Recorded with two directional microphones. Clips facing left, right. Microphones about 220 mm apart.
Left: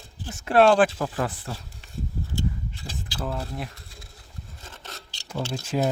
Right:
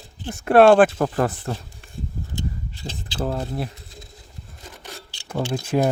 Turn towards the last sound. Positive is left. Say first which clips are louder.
# right 5 dB
turn(degrees=-55)  # may be behind; listen again after turning